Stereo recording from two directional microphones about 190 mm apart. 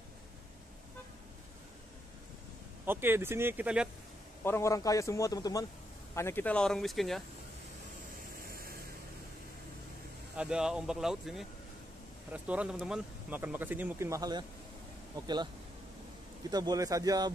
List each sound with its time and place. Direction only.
2.8 s speech: 10° right (ahead or behind)
4.4 s a man's voice: 15° left (ahead or behind)
10.3 s speech: 5° right (ahead or behind); by 15.4 s 20° right (ahead or behind)
16.4 s speech: 20° right (ahead or behind)